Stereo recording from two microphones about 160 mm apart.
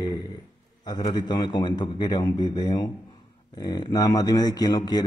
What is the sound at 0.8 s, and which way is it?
Speech, 25° left (ahead or behind).